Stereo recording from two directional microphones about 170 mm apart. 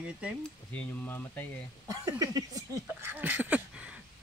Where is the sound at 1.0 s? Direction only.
10° left (ahead or behind).